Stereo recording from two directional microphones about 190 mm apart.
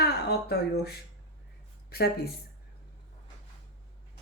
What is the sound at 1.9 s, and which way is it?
Speech, 55° left (ahead or behind).